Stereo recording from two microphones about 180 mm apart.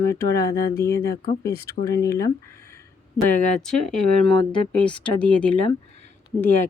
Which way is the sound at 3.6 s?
5° left (ahead or behind).